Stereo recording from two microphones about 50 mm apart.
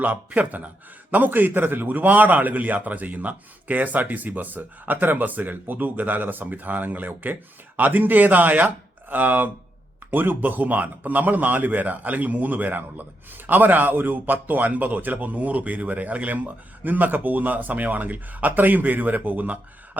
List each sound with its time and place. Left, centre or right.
0.0 s a man's voice: right